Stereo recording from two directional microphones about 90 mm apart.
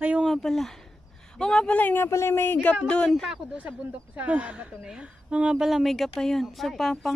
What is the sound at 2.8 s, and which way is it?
Speech, 10° left (ahead or behind).